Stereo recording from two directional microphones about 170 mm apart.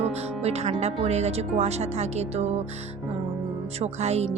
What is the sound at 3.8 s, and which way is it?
Speech, 40° right (ahead or behind).